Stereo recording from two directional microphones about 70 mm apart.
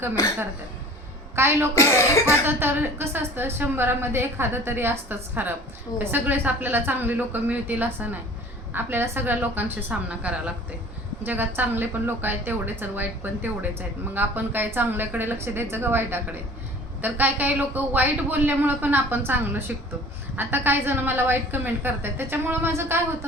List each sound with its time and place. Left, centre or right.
1.4 s a woman's voice: right
1.7 s speech: left
2.5 s a woman's voice: right